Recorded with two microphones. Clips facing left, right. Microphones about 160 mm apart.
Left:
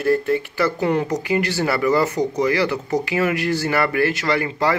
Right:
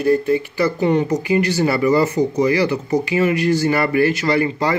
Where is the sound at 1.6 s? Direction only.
20° right (ahead or behind).